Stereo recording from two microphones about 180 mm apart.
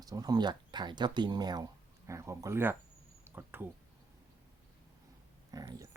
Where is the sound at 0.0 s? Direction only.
20° right (ahead or behind).